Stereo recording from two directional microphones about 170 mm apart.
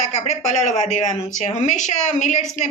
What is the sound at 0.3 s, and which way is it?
A woman's voice, 45° left (ahead or behind).